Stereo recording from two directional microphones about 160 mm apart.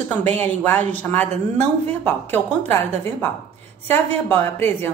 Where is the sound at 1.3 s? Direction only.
45° right (ahead or behind).